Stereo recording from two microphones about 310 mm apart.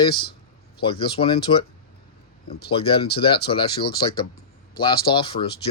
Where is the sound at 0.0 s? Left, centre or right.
Centre.